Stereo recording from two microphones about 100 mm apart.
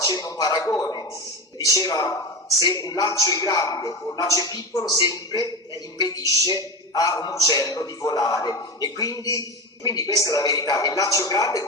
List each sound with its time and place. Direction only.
0.0 s a man's voice: 40° left (ahead or behind)
6.2 s a woman's voice: 35° right (ahead or behind)
6.9 s a man's voice: 40° left (ahead or behind)